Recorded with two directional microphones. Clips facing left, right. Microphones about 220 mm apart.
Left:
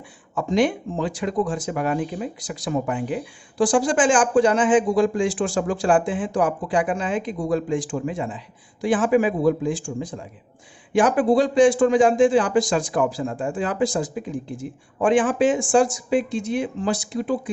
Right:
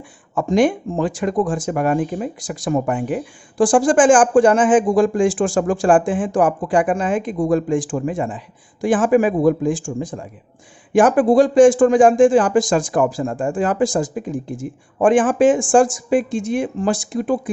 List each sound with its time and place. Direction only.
0.3 s speech: 50° right (ahead or behind)